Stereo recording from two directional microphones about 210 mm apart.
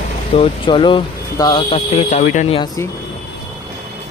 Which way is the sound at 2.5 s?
15° left (ahead or behind).